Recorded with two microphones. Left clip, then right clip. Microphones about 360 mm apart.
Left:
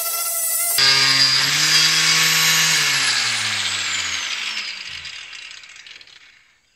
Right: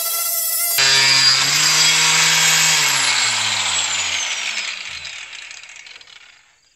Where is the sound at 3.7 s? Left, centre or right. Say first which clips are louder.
Right 2 dB; right.